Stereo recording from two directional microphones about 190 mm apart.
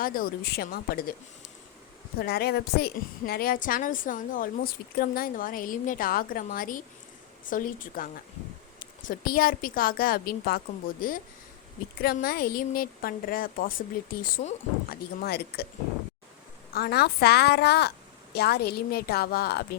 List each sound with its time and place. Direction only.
0.0 s a woman's voice: 50° left (ahead or behind)
2.2 s a woman's voice: 55° left (ahead or behind)
16.7 s a woman's voice: 55° left (ahead or behind)